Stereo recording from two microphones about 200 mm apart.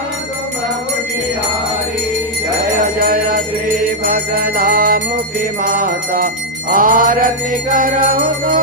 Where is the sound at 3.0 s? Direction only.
45° right (ahead or behind).